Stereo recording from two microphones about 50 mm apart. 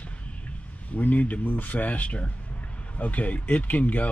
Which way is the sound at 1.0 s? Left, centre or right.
Left.